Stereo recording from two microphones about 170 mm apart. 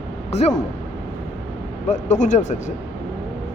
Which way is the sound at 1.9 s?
45° left (ahead or behind).